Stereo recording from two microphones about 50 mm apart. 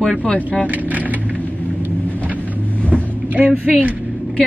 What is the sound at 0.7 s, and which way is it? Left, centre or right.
Speech, right.